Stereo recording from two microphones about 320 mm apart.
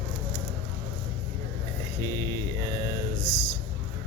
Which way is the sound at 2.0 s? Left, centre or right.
Centre.